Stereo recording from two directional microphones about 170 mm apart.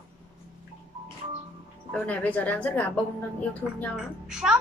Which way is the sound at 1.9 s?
10° left (ahead or behind).